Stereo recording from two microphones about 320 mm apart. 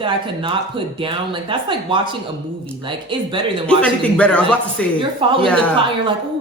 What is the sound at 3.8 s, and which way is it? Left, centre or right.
Speech, centre.